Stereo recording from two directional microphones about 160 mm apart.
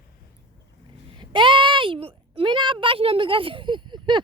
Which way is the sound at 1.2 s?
30° right (ahead or behind).